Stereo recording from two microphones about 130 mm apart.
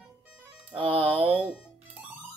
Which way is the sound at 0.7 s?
40° right (ahead or behind).